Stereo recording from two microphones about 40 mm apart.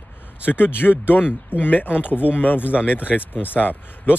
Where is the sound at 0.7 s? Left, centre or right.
Left.